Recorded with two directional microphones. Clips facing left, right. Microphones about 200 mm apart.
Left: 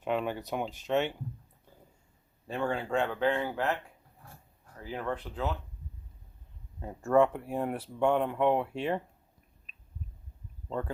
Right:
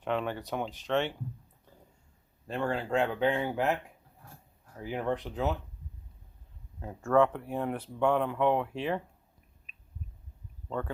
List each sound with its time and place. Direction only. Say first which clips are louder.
0.0 s speech: left 1 dB; 10° left (ahead or behind)
2.5 s speech: right 1 dB; centre (ahead or behind)
4.8 s speech: right 3 dB; 15° right (ahead or behind)
6.8 s speech: even; 5° left (ahead or behind)
10.7 s speech: even; centre (ahead or behind)